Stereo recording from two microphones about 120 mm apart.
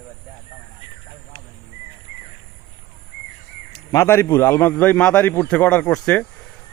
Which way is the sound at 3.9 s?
20° left (ahead or behind).